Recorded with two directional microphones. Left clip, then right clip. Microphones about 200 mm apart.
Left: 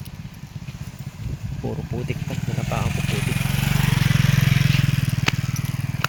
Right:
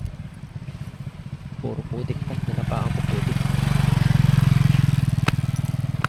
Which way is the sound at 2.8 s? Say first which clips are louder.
Left 2 dB; 20° left (ahead or behind).